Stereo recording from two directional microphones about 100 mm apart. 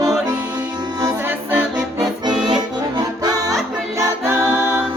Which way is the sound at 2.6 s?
45° right (ahead or behind).